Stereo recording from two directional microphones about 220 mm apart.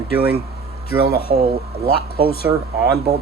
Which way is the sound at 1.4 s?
25° right (ahead or behind).